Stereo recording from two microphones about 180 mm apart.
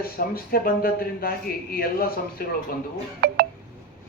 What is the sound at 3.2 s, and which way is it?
Telephone dialing, 60° right (ahead or behind).